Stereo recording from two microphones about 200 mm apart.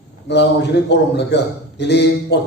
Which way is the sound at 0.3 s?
60° left (ahead or behind).